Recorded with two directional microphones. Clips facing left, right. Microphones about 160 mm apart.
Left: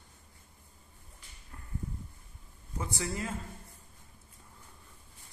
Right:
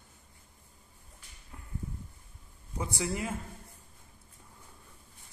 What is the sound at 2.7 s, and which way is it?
Speech, 15° right (ahead or behind).